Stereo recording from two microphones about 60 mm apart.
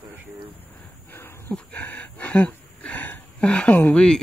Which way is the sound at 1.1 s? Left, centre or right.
Left.